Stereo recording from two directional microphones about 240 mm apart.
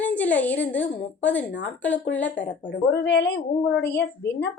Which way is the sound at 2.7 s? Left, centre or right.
Left.